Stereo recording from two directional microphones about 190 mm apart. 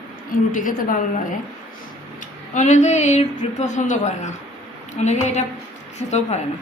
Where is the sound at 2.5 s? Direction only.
40° left (ahead or behind).